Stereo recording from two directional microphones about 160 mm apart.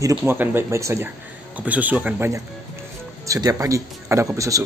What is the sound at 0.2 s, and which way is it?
Speech, 10° right (ahead or behind).